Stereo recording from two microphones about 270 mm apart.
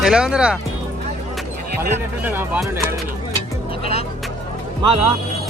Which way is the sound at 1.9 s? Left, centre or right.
Centre.